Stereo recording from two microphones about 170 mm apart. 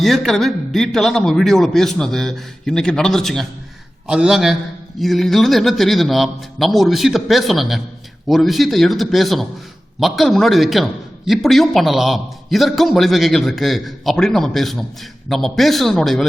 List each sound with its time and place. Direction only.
0.0 s a man's voice: centre (ahead or behind)